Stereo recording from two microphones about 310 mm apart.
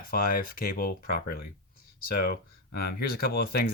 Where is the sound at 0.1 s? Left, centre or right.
Left.